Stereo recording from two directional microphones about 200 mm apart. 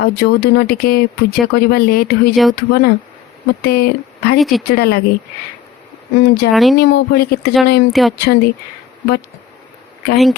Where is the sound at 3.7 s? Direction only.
50° left (ahead or behind).